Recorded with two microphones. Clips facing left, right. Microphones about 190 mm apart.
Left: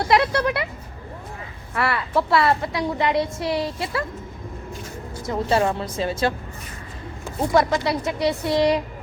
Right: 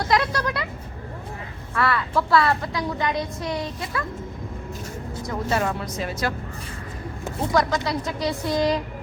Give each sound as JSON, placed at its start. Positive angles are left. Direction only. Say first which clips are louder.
{"t": 0.0, "sound": "a woman's voice", "louder": "left 4 dB", "side_deg": 25}
{"t": 1.7, "sound": "a woman's voice", "louder": "left 1 dB", "side_deg": 25}
{"t": 5.3, "sound": "a woman's voice", "louder": "left 4 dB", "side_deg": 25}
{"t": 7.5, "sound": "a woman's voice", "louder": "left 3 dB", "side_deg": 25}